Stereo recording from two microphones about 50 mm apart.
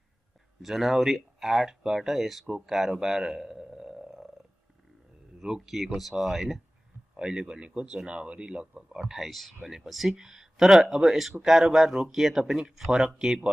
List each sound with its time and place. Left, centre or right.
0.6 s speech: centre
2.5 s a sound: centre
5.4 s speech: centre
7.2 s speech: centre
9.1 s speech: centre